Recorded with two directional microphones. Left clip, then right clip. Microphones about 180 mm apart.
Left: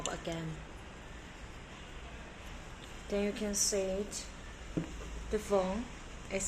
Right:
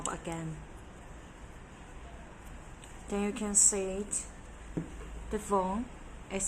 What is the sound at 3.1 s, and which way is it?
Speech, 45° right (ahead or behind).